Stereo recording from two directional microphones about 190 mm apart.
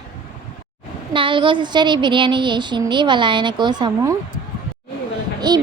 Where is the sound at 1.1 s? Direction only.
25° right (ahead or behind).